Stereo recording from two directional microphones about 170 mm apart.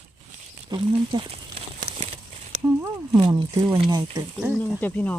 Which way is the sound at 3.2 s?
30° right (ahead or behind).